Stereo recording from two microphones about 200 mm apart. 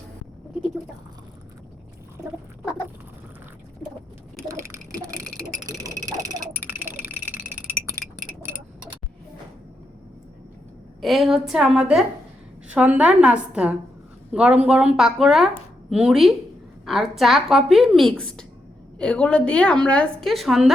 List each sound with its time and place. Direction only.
4.4 s a sound: 15° right (ahead or behind)
5.5 s frog: 15° right (ahead or behind)
11.0 s a woman's voice: centre (ahead or behind)